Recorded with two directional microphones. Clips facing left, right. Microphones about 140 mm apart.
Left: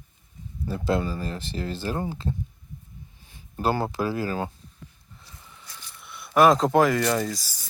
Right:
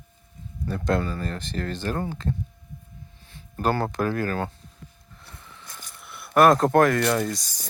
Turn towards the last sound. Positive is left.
turn(degrees=0)  # may be behind; listen again after turning